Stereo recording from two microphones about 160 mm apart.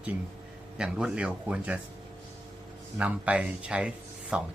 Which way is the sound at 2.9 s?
10° right (ahead or behind).